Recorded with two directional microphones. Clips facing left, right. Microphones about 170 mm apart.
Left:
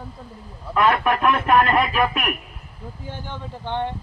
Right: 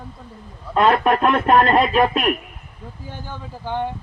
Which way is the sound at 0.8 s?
30° right (ahead or behind).